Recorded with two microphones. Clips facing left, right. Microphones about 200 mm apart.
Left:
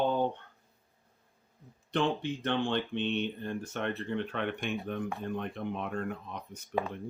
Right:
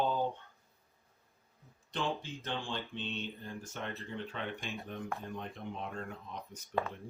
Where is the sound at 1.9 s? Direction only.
65° left (ahead or behind).